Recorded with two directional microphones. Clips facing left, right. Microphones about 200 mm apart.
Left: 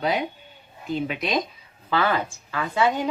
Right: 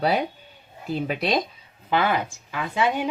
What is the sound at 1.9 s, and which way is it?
A woman's voice, 15° right (ahead or behind).